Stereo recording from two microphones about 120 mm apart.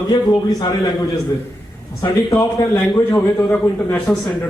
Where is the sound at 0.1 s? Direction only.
35° left (ahead or behind).